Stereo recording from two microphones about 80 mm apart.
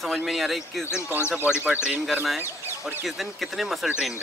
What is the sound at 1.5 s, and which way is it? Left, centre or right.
Speech, centre.